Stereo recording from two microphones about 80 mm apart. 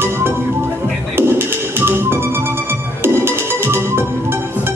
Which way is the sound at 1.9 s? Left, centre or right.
Right.